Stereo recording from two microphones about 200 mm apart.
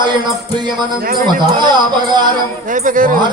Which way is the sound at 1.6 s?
20° right (ahead or behind).